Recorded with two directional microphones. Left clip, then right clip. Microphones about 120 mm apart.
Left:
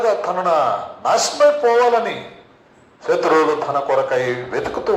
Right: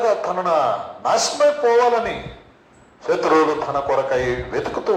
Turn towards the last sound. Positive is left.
turn(degrees=20)  # may be behind; listen again after turning